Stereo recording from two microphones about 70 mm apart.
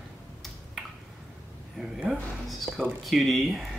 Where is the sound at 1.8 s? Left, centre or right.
Centre.